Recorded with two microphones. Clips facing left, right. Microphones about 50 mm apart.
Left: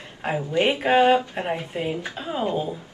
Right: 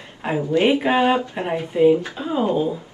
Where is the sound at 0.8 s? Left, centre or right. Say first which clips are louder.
Even; centre.